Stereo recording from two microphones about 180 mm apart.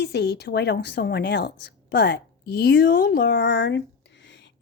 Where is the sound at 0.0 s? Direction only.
65° left (ahead or behind).